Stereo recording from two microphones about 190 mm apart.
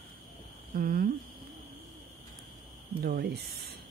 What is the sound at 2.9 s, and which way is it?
Speech, 55° right (ahead or behind).